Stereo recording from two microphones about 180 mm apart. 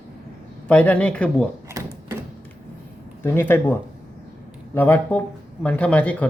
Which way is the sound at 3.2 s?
10° left (ahead or behind).